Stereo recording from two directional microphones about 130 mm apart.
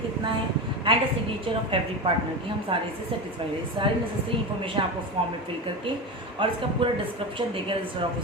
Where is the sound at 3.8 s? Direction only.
40° right (ahead or behind).